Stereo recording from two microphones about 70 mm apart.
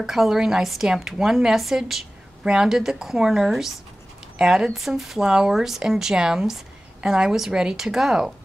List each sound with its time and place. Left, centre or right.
0.0 s a woman's voice: centre